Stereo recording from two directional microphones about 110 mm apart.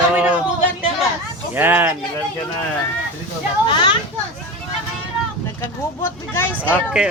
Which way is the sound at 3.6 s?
50° left (ahead or behind).